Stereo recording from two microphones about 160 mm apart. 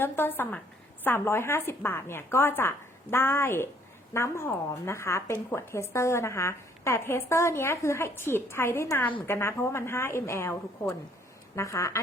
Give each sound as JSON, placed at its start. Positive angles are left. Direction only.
{"t": 0.0, "sound": "speech", "side_deg": 15}